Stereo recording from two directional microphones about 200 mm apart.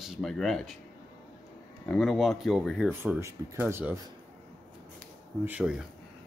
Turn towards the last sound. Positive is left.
turn(degrees=-5)  # may be behind; listen again after turning